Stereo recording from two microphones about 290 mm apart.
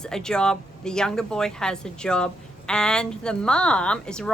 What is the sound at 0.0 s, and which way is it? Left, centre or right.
Speech, centre.